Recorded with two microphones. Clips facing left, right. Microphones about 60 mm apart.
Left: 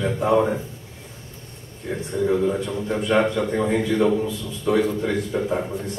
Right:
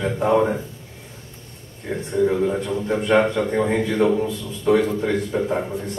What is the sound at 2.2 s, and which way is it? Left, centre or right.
Speech, centre.